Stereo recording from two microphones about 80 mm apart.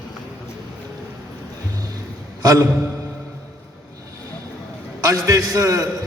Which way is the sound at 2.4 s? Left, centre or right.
Right.